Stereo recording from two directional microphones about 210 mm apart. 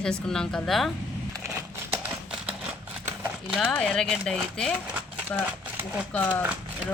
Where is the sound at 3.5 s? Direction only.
5° left (ahead or behind).